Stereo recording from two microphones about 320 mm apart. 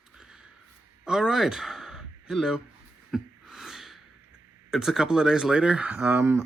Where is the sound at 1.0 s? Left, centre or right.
Centre.